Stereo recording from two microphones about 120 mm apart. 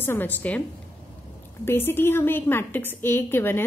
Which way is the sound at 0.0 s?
15° left (ahead or behind).